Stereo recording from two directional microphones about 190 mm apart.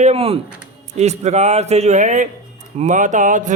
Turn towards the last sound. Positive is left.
turn(degrees=-40)  # may be behind; listen again after turning